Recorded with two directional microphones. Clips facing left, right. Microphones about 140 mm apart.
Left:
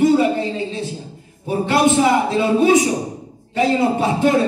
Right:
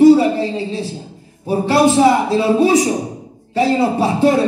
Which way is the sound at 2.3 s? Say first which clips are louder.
Right 1 dB; 30° right (ahead or behind).